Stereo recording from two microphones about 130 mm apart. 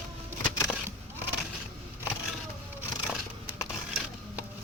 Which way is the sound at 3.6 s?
10° right (ahead or behind).